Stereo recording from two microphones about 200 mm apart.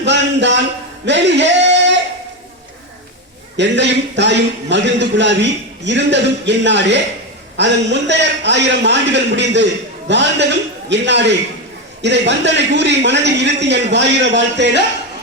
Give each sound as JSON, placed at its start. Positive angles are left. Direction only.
{"t": 0.0, "sound": "a sound", "side_deg": -60}
{"t": 1.0, "sound": "speech", "side_deg": -60}
{"t": 3.6, "sound": "a man's voice", "side_deg": -60}